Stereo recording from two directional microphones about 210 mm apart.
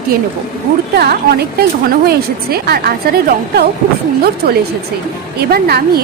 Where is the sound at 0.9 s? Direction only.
50° right (ahead or behind).